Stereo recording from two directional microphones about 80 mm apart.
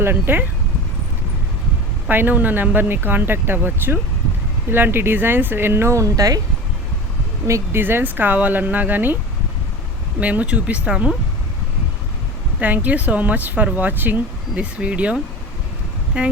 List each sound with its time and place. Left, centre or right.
0.0 s speech: right
2.0 s speech: right
7.4 s speech: right
7.8 s speech: right
10.2 s speech: centre
12.5 s speech: right